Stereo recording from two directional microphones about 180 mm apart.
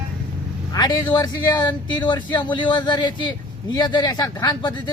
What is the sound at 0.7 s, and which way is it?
Speech, 20° left (ahead or behind).